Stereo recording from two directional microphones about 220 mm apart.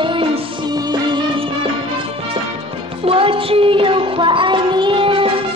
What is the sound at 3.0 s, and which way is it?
Child singing, 25° right (ahead or behind).